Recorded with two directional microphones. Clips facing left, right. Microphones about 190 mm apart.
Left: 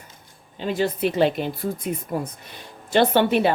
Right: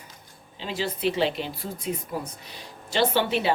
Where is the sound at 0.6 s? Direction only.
50° left (ahead or behind).